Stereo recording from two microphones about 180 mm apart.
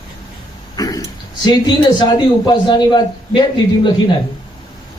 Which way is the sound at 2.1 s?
25° left (ahead or behind).